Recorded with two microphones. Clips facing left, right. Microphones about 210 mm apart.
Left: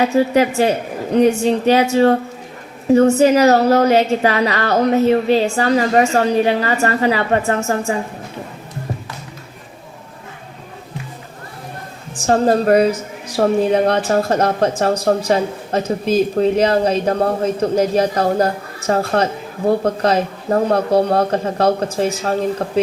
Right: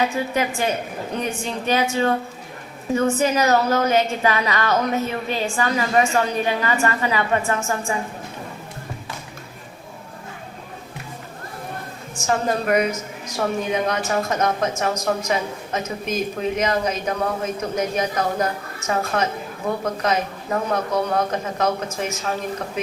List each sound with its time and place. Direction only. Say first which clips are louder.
0.0 s a woman's voice: left 8 dB; 40° left (ahead or behind)
12.1 s a woman's voice: left 8 dB; 35° left (ahead or behind)